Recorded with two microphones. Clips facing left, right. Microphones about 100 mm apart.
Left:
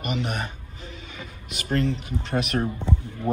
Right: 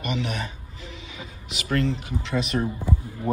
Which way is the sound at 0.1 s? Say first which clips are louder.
Left 1 dB; 45° left (ahead or behind).